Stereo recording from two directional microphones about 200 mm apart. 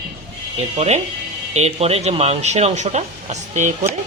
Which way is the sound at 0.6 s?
35° right (ahead or behind).